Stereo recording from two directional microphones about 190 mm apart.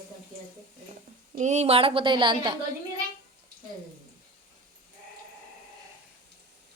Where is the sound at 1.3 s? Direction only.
40° right (ahead or behind).